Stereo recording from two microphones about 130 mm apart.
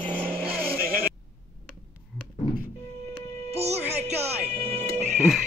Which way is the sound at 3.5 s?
55° right (ahead or behind).